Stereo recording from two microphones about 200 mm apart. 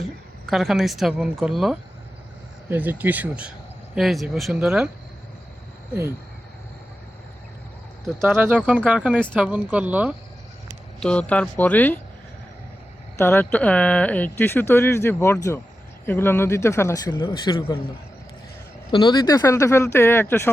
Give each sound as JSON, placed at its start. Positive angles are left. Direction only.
{"t": 0.4, "sound": "speech", "side_deg": 0}
{"t": 5.9, "sound": "speech", "side_deg": -15}
{"t": 8.2, "sound": "speech", "side_deg": -10}
{"t": 11.0, "sound": "speech", "side_deg": 5}
{"t": 13.1, "sound": "speech", "side_deg": 10}
{"t": 18.9, "sound": "speech", "side_deg": 20}